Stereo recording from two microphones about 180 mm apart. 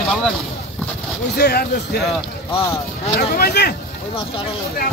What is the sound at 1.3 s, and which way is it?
Speech, 65° left (ahead or behind).